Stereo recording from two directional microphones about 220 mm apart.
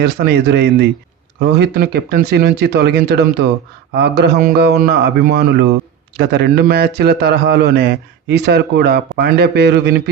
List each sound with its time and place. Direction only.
0.0 s a man's voice: 45° right (ahead or behind)